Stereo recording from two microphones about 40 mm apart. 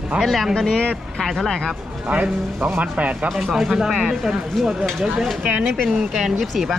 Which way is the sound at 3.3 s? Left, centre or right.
Centre.